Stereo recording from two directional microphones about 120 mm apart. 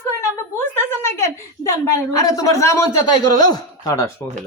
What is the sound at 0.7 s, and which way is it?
Speech, 20° left (ahead or behind).